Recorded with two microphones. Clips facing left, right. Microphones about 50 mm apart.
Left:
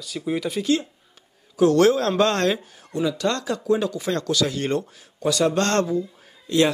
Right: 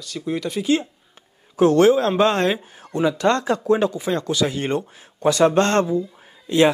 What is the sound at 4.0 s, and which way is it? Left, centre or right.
Speech, centre.